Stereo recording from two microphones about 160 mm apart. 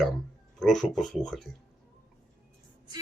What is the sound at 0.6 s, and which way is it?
Speech, centre (ahead or behind).